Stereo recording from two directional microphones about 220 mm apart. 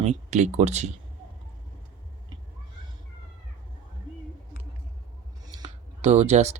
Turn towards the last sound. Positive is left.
turn(degrees=-30)  # may be behind; listen again after turning